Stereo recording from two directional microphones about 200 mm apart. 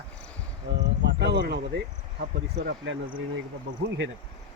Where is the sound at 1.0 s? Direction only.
60° right (ahead or behind).